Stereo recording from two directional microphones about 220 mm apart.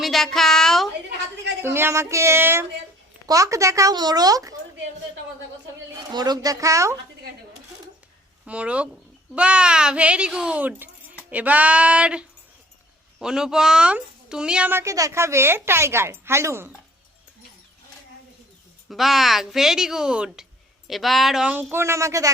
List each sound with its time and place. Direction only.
0.0 s a woman's voice: centre (ahead or behind)
1.6 s speech: 10° right (ahead or behind)
6.1 s speech: 20° right (ahead or behind)
8.4 s a woman's voice: 5° right (ahead or behind)
18.9 s a woman's voice: centre (ahead or behind)